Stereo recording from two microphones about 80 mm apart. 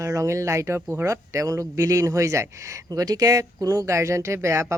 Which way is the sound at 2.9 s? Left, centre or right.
Right.